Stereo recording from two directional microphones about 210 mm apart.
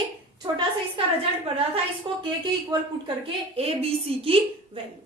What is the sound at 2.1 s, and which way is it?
Speech, 25° right (ahead or behind).